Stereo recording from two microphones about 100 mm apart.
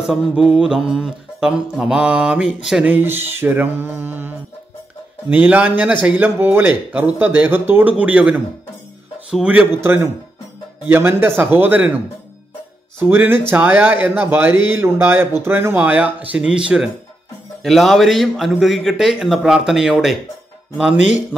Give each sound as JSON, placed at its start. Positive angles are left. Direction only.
{"t": 0.0, "sound": "a man's voice", "side_deg": -5}
{"t": 0.5, "sound": "mantra", "side_deg": -5}
{"t": 2.9, "sound": "mantra", "side_deg": -20}
{"t": 5.3, "sound": "mantra", "side_deg": -15}
{"t": 9.8, "sound": "mantra", "side_deg": -25}
{"t": 13.1, "sound": "mantra", "side_deg": -20}
{"t": 17.6, "sound": "a man's voice", "side_deg": 0}